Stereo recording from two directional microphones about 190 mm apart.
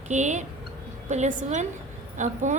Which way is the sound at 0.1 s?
40° right (ahead or behind).